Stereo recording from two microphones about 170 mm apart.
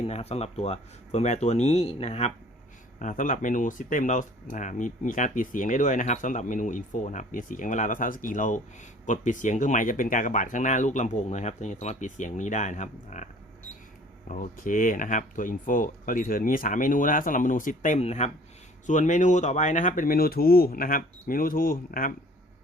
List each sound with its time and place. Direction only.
0.0 s speech: 35° left (ahead or behind)
14.3 s speech: 50° left (ahead or behind)